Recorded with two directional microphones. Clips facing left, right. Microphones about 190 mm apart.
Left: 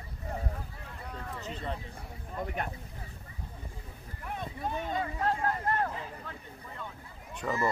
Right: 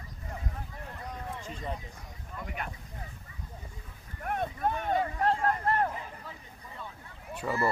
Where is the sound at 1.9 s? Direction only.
40° left (ahead or behind).